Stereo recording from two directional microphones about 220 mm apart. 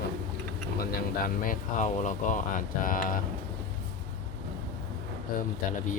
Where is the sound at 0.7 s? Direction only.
40° left (ahead or behind).